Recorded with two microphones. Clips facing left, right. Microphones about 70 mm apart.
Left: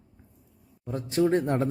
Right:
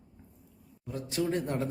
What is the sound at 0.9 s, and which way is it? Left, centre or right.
Speech, left.